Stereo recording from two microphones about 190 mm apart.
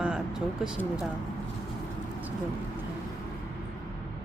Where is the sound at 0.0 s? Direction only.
5° right (ahead or behind).